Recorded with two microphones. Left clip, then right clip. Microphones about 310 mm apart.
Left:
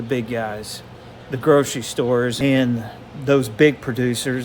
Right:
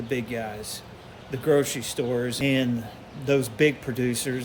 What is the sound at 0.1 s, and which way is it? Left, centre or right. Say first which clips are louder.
Speech: left 7 dB; centre.